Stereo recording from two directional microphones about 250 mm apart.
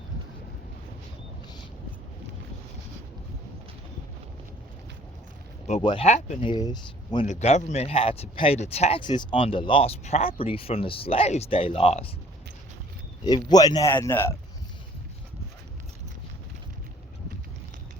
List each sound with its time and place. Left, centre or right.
5.6 s speech: left
7.3 s speech: left
13.5 s a man's voice: centre